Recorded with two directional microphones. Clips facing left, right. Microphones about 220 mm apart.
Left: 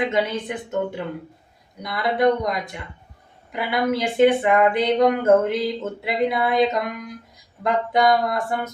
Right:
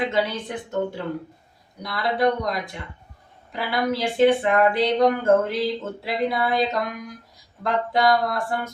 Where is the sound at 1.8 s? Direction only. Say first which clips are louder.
Left 2 dB; 20° left (ahead or behind).